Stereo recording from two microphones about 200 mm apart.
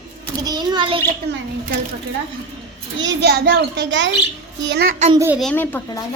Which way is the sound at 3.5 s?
65° right (ahead or behind).